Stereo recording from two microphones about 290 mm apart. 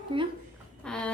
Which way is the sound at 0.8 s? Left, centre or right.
Centre.